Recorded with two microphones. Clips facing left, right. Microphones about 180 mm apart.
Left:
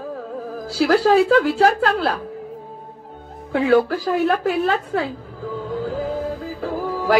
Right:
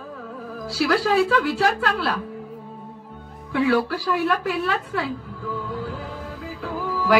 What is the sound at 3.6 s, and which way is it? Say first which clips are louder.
A woman's voice: left 4 dB; 50° left (ahead or behind).